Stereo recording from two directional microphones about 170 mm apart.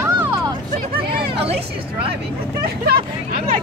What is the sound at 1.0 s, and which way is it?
Hubbub, 35° right (ahead or behind).